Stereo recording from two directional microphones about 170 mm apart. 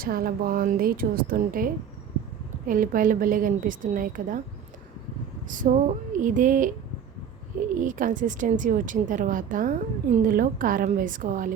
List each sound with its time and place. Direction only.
0.0 s a woman's voice: 60° right (ahead or behind)
5.5 s a woman's voice: 50° right (ahead or behind)
7.8 s a woman's voice: 50° right (ahead or behind)